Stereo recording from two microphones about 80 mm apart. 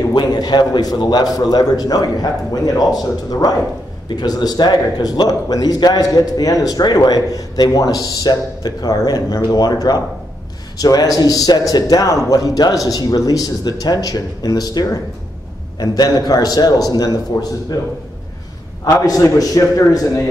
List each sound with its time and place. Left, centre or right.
0.1 s a man's voice: left
18.9 s a man's voice: left